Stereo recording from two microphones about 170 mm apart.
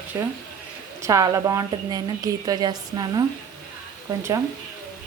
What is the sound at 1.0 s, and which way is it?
A woman's voice, 20° right (ahead or behind).